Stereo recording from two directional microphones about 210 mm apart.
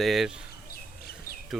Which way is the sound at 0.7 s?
45° left (ahead or behind).